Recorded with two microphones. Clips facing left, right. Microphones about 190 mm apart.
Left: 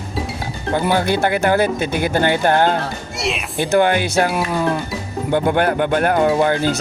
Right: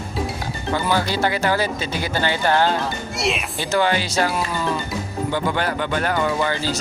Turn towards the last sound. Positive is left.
turn(degrees=55)  # may be behind; listen again after turning